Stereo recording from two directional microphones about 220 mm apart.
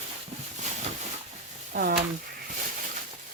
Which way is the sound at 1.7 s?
40° right (ahead or behind).